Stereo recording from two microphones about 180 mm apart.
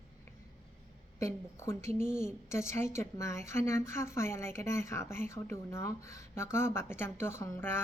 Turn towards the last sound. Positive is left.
turn(degrees=15)  # may be behind; listen again after turning